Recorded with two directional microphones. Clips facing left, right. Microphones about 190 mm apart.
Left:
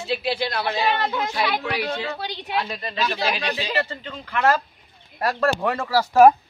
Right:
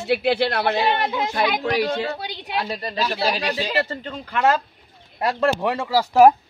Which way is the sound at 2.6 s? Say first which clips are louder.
Right 2 dB; 35° right (ahead or behind).